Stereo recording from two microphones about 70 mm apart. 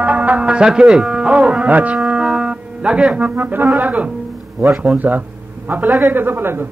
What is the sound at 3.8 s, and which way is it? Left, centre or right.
Speech, right.